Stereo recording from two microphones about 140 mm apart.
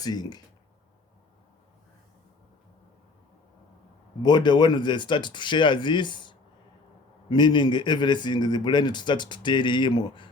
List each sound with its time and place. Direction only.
0.0 s speech: 30° left (ahead or behind)
4.2 s speech: 30° left (ahead or behind)